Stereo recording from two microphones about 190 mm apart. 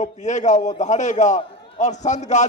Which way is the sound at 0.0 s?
40° left (ahead or behind).